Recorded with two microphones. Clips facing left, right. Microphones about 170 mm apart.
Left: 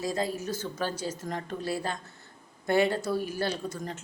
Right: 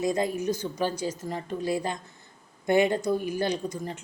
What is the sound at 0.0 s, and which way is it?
A woman's voice, 20° right (ahead or behind).